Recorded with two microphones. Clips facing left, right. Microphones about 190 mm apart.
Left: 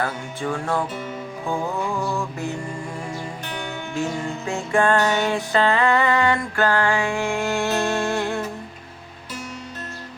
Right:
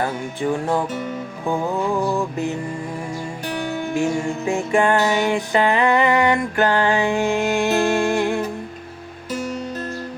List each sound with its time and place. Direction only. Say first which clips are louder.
0.0 s music: right 4 dB; 15° right (ahead or behind)
3.4 s music: right 6 dB; 35° right (ahead or behind)
3.9 s music: right 4 dB; 15° right (ahead or behind)